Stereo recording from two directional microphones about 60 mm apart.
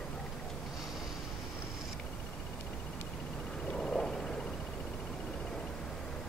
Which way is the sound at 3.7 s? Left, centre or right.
Centre.